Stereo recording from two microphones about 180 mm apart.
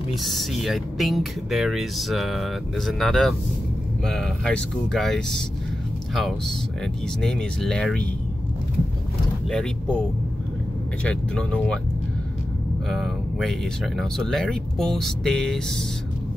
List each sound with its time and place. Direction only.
0.1 s speech: centre (ahead or behind)
11.1 s speech: 5° left (ahead or behind)
12.9 s speech: centre (ahead or behind)